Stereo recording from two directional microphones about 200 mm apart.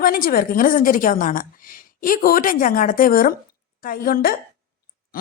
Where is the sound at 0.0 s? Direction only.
45° left (ahead or behind).